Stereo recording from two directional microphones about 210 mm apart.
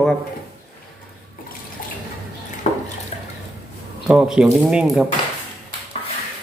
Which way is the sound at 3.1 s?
35° left (ahead or behind).